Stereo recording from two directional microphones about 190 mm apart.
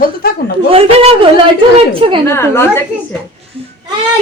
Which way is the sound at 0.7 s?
30° right (ahead or behind).